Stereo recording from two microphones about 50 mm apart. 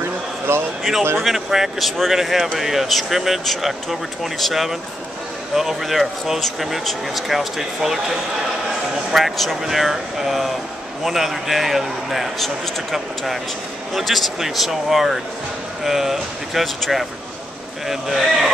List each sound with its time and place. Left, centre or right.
0.5 s a man's voice: right
1.2 s speech: centre
9.1 s speech: centre